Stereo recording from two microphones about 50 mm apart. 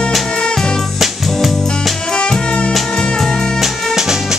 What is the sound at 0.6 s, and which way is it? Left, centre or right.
Music, centre.